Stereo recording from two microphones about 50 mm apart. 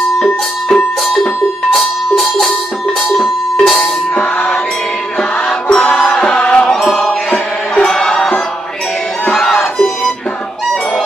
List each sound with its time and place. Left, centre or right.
1.7 s music: centre
4.1 s music: left
9.3 s music: centre